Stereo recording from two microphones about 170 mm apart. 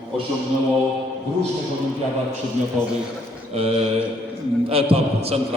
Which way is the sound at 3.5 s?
35° right (ahead or behind).